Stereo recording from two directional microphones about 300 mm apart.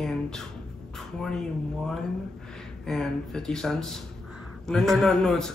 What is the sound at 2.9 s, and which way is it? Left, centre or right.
A man's voice, centre.